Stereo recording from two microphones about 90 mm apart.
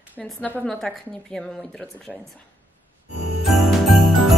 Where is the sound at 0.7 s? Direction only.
5° left (ahead or behind).